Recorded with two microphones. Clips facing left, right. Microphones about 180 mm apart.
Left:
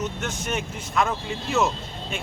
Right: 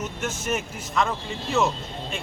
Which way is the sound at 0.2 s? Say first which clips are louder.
Right 1 dB; 5° right (ahead or behind).